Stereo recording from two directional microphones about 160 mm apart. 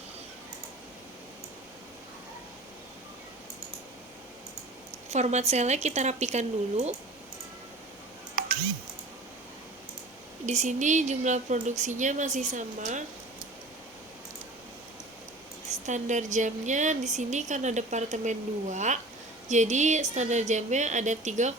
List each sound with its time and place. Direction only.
5.1 s a woman's voice: 45° right (ahead or behind)
10.4 s a woman's voice: 45° right (ahead or behind)
15.9 s a woman's voice: 50° right (ahead or behind)